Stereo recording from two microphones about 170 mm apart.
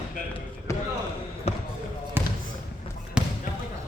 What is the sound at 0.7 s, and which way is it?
Basketball bounce, 15° left (ahead or behind).